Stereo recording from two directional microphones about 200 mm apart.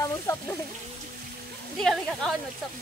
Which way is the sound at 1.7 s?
5° left (ahead or behind).